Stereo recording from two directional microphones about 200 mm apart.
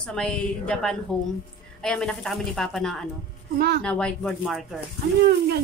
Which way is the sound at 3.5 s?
50° right (ahead or behind).